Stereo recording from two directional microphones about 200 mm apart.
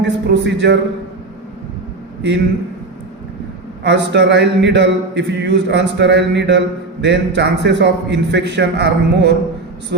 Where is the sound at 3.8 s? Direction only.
60° right (ahead or behind).